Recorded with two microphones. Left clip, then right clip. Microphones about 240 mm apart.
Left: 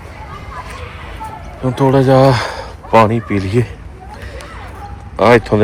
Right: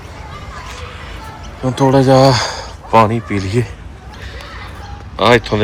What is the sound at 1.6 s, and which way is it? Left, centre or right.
Speech, centre.